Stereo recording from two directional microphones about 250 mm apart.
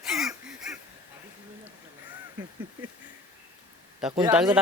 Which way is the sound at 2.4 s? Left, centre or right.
Centre.